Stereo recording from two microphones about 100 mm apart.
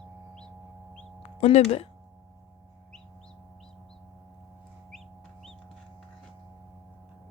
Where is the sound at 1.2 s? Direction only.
90° left.